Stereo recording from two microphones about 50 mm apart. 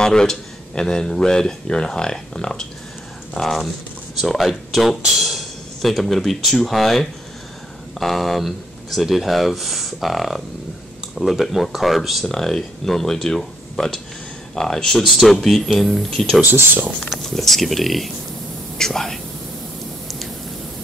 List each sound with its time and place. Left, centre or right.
0.0 s speech: centre
3.3 s speech: centre
16.4 s speech: right
17.2 s speech: centre